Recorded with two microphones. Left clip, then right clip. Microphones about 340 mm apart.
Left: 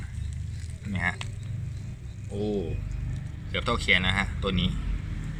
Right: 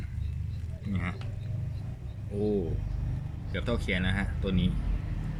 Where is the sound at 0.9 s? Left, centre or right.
Centre.